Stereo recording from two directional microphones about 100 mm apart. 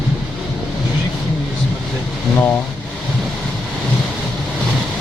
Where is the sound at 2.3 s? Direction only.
20° left (ahead or behind).